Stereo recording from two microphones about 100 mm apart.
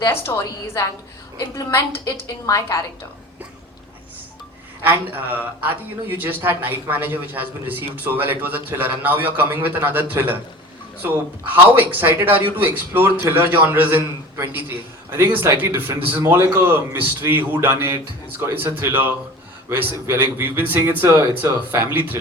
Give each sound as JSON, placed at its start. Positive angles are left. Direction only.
{"t": 0.0, "sound": "a woman's voice", "side_deg": 25}
{"t": 4.8, "sound": "a man's voice", "side_deg": -20}